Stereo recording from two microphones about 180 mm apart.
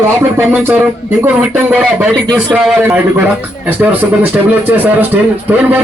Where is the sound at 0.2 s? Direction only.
10° right (ahead or behind).